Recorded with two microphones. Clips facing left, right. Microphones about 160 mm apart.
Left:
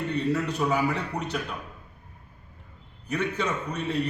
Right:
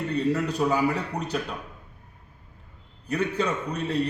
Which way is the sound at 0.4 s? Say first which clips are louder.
Right 2 dB; 35° right (ahead or behind).